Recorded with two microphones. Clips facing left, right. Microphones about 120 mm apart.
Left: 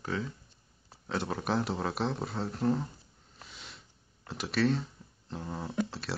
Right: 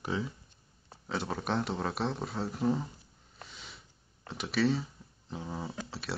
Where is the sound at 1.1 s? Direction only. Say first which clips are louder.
Left 1 dB; centre (ahead or behind).